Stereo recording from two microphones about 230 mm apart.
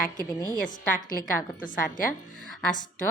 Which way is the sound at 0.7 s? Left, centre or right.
Left.